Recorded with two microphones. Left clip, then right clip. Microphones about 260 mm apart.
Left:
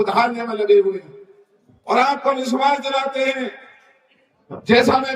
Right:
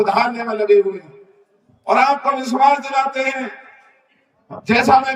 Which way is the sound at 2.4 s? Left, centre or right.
Centre.